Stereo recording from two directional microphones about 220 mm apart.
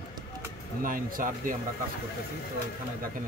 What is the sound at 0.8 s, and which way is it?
Speech, 40° right (ahead or behind).